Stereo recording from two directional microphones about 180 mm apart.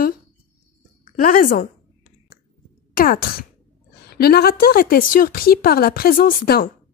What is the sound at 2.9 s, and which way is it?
Speech, 55° left (ahead or behind).